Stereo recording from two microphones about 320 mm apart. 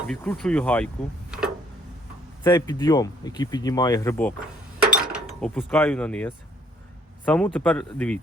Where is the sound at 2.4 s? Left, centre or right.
Centre.